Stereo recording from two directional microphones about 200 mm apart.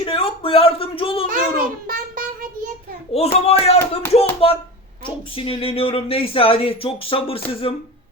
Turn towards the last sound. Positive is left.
turn(degrees=25)  # may be behind; listen again after turning